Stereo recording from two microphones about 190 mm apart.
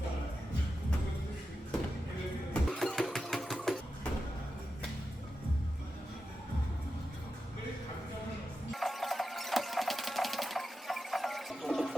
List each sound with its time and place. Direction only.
2.5 s music: centre (ahead or behind)
8.7 s sewing machine: centre (ahead or behind)